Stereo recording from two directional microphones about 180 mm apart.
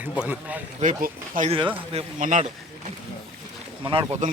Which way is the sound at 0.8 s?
45° right (ahead or behind).